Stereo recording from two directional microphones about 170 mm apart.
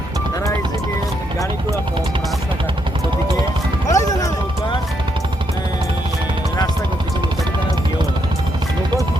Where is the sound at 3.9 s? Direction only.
20° left (ahead or behind).